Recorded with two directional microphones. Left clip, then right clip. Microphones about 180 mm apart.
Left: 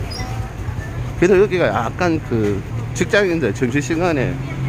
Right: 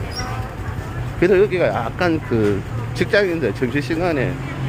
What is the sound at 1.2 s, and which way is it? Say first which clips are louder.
Speech: left 1 dB; 20° left (ahead or behind).